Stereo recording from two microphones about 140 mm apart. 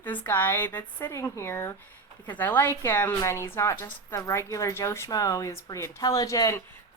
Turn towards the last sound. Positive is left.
turn(degrees=25)  # may be behind; listen again after turning